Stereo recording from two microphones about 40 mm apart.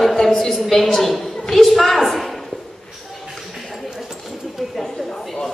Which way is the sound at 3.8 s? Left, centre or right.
Centre.